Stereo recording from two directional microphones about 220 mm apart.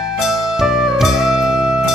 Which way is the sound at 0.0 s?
Centre (ahead or behind).